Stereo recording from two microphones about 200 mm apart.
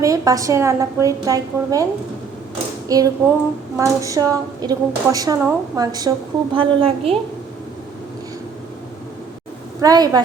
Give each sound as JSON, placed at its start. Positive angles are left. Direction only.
{"t": 0.0, "sound": "a woman's voice", "side_deg": -15}
{"t": 2.9, "sound": "a woman's voice", "side_deg": -15}
{"t": 9.8, "sound": "a woman's voice", "side_deg": -20}